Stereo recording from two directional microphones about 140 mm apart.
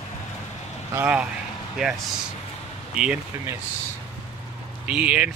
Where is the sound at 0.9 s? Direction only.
10° right (ahead or behind).